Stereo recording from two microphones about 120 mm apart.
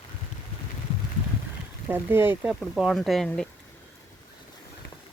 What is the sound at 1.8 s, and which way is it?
Speech, 20° right (ahead or behind).